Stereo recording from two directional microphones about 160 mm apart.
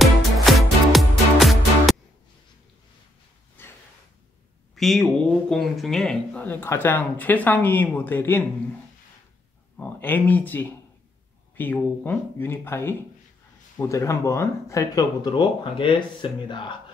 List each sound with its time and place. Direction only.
0.0 s music: centre (ahead or behind)
3.6 s a sound: 15° left (ahead or behind)
4.7 s speech: centre (ahead or behind)
9.8 s speech: 10° left (ahead or behind); by 16.7 s 30° left (ahead or behind)